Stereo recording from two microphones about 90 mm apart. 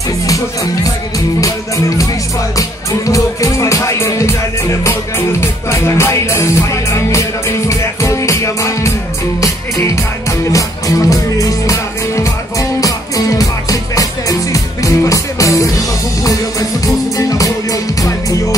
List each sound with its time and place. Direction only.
2.5 s music: 35° left (ahead or behind)
5.4 s music: 30° left (ahead or behind)
10.5 s music: 40° left (ahead or behind)